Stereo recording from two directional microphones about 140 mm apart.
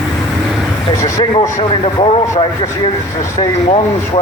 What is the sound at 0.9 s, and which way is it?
Speech, 20° left (ahead or behind).